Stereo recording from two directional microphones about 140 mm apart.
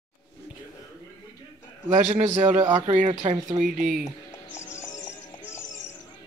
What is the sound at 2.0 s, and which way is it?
A man's voice, 50° right (ahead or behind).